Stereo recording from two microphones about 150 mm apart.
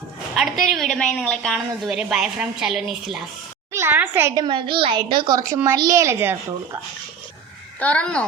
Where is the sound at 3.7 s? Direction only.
15° right (ahead or behind).